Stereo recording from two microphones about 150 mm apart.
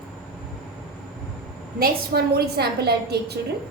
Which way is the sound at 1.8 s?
90° right.